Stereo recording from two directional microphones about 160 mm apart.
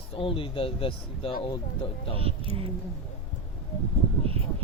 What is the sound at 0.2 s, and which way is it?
Speech, 35° left (ahead or behind).